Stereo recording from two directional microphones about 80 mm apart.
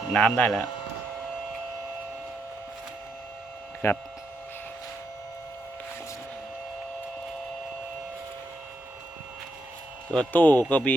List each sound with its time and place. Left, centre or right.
0.1 s speech: centre
3.8 s speech: left
10.1 s speech: centre